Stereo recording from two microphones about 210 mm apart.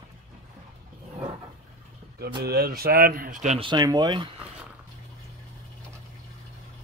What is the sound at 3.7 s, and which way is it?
Speech, 20° right (ahead or behind).